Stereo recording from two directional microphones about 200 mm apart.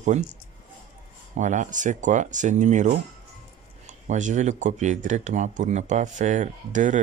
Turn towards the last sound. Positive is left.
turn(degrees=-40)  # may be behind; listen again after turning